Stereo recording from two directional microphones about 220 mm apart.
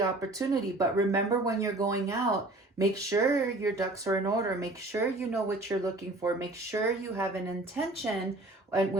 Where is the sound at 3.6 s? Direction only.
15° right (ahead or behind).